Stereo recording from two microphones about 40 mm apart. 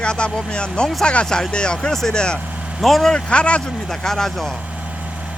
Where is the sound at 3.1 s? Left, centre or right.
Left.